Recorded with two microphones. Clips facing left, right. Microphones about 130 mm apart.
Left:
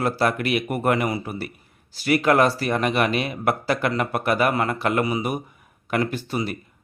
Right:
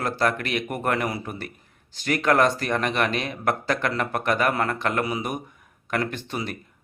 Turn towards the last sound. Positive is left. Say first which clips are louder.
# left 4 dB
turn(degrees=5)  # may be behind; listen again after turning